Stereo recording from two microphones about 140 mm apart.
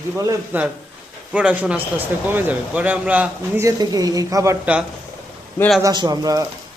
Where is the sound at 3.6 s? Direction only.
25° right (ahead or behind).